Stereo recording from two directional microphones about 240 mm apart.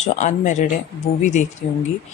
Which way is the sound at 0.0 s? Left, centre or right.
Left.